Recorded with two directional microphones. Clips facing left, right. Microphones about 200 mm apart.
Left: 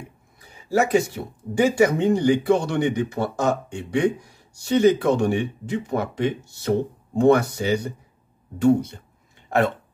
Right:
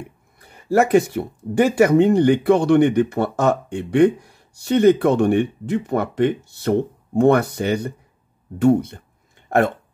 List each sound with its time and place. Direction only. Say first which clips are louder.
0.4 s speech: right 4 dB; 60° right (ahead or behind)